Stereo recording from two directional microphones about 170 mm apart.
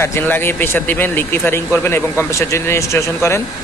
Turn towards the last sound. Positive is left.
turn(degrees=15)  # may be behind; listen again after turning